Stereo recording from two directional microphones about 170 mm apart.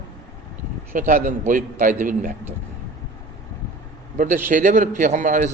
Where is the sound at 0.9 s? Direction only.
50° right (ahead or behind).